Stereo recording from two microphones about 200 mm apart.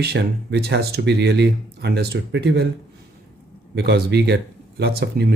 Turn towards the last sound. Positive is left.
turn(degrees=-55)  # may be behind; listen again after turning